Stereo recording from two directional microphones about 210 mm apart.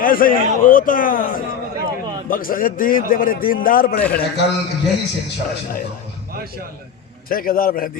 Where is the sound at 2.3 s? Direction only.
40° left (ahead or behind).